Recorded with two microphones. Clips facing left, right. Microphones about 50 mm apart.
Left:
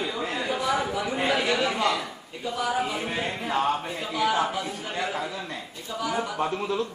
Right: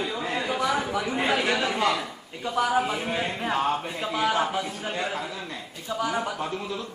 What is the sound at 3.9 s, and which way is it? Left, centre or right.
A man's voice, right.